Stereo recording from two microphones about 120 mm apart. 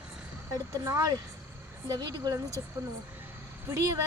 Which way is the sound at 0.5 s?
30° right (ahead or behind).